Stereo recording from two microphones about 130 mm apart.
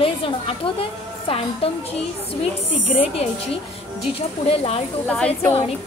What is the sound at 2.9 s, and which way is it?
A woman's voice, 45° left (ahead or behind).